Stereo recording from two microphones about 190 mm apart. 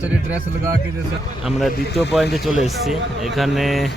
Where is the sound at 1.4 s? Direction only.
Centre (ahead or behind).